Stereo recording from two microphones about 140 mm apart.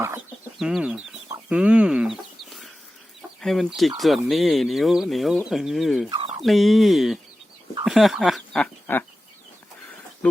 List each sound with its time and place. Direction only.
0.6 s speech: 5° right (ahead or behind)
1.5 s chicken: 5° right (ahead or behind)
3.2 s speech: centre (ahead or behind)
6.1 s fowl: 40° right (ahead or behind)
6.4 s speech: centre (ahead or behind)